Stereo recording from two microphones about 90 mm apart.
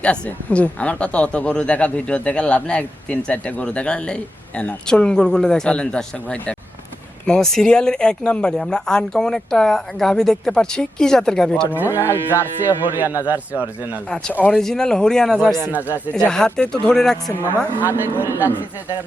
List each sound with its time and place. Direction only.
0.0 s speech: 15° left (ahead or behind)
11.9 s speech: 30° left (ahead or behind)
12.3 s speech: 20° right (ahead or behind)
14.5 s speech: 5° left (ahead or behind)
17.7 s speech: 20° right (ahead or behind)